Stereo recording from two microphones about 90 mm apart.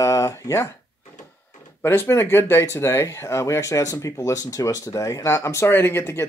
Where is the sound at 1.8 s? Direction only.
25° left (ahead or behind).